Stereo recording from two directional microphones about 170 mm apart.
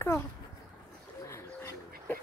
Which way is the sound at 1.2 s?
15° left (ahead or behind).